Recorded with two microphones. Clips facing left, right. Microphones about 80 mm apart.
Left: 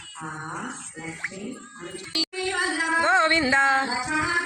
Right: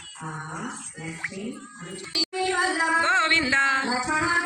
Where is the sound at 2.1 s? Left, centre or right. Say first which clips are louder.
Right 3 dB; right.